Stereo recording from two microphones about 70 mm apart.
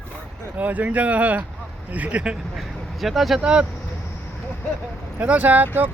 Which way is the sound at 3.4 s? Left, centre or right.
Centre.